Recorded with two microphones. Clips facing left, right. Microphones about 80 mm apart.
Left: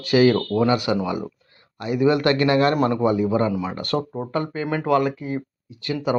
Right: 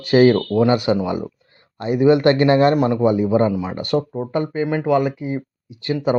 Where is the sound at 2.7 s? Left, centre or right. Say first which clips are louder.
Right 3 dB; centre.